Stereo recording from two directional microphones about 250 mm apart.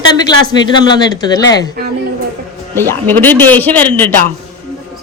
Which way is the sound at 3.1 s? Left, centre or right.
Centre.